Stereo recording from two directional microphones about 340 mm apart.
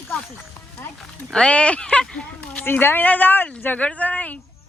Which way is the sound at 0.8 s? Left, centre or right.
Centre.